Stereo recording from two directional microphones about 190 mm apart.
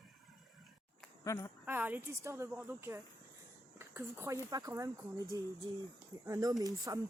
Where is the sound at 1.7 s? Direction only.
10° right (ahead or behind).